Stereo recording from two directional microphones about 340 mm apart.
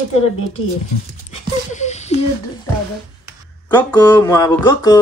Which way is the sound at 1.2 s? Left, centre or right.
Left.